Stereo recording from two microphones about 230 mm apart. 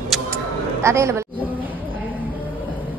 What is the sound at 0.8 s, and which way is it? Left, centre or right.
Speech, centre.